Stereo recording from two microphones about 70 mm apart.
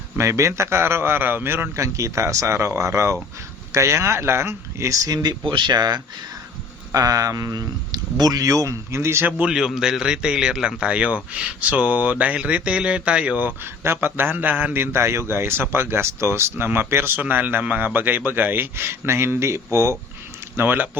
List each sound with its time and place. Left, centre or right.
0.2 s a man's voice: right
1.8 s a man's voice: right
5.0 s speech: right
6.9 s speech: right
9.2 s a man's voice: centre
13.8 s a man's voice: right
20.6 s a man's voice: right